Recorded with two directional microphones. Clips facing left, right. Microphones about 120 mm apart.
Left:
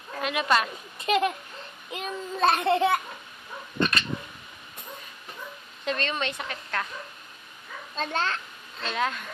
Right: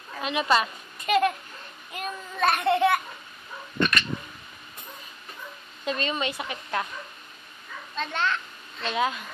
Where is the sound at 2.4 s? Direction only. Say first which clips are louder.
Even; 30° left (ahead or behind).